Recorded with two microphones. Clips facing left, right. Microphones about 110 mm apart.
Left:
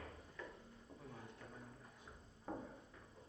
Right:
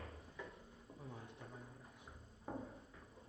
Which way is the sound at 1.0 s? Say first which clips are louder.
Right 3 dB; 25° right (ahead or behind).